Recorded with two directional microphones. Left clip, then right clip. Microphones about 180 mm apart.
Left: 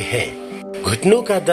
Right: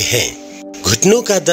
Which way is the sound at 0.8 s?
45° right (ahead or behind).